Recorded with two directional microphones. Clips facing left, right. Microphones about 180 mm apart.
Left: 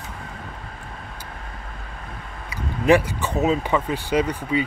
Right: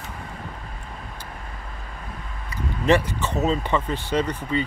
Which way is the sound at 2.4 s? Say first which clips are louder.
Left 2 dB; 10° left (ahead or behind).